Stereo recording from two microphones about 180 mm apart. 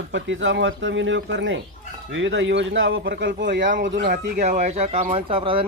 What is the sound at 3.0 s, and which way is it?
Speech, 60° right (ahead or behind).